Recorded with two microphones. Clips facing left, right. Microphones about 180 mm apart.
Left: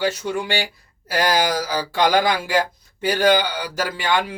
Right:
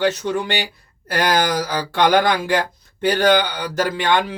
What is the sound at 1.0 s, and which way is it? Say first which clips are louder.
Speech: right 1 dB; 60° right (ahead or behind).